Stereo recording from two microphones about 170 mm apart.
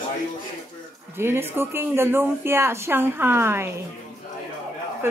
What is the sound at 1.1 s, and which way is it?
Speech, 15° right (ahead or behind).